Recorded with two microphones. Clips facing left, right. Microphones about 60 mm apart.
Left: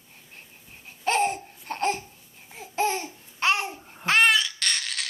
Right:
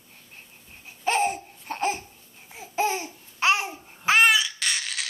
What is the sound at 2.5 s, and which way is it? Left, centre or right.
Babbling, centre.